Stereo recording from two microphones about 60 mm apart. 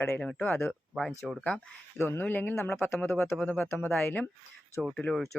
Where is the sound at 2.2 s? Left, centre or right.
Left.